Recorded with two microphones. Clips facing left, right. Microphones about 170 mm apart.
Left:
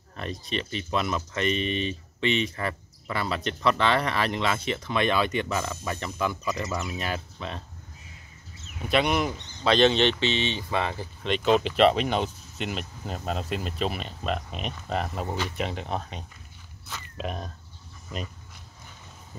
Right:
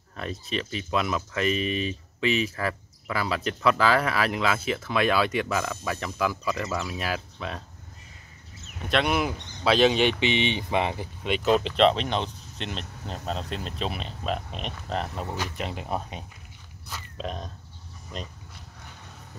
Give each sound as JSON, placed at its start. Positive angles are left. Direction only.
{"t": 0.2, "sound": "speech", "side_deg": 0}
{"t": 8.8, "sound": "speech", "side_deg": 0}
{"t": 11.2, "sound": "speech", "side_deg": -5}
{"t": 17.2, "sound": "speech", "side_deg": 5}